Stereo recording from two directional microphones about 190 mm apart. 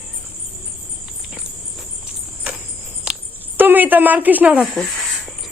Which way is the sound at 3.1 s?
5° right (ahead or behind).